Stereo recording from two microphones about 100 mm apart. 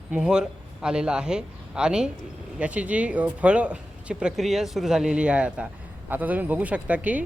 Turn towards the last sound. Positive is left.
turn(degrees=-15)  # may be behind; listen again after turning